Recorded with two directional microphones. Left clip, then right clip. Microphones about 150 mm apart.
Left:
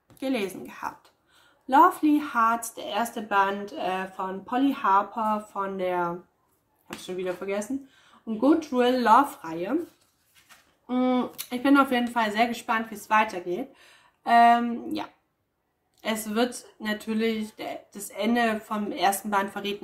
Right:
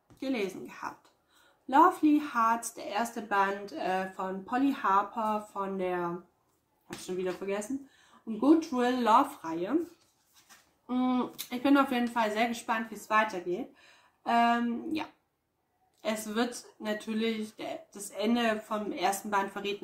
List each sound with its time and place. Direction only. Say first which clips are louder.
0.2 s speech: left 4 dB; 35° left (ahead or behind)
8.4 s speech: left 3 dB; 25° left (ahead or behind)
10.9 s speech: left 5 dB; 20° left (ahead or behind)